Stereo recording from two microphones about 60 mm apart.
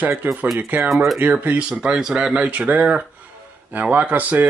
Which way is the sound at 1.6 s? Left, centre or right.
Centre.